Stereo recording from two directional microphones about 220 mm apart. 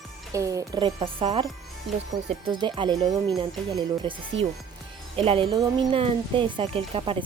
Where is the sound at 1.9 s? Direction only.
Centre (ahead or behind).